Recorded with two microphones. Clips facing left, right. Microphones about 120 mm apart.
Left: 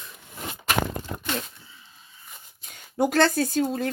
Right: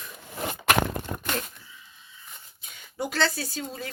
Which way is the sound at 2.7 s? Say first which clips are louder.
Left 8 dB; 50° left (ahead or behind).